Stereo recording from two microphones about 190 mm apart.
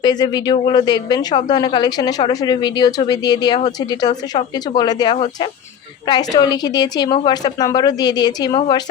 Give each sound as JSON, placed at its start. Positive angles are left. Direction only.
{"t": 0.0, "sound": "a woman's voice", "side_deg": 20}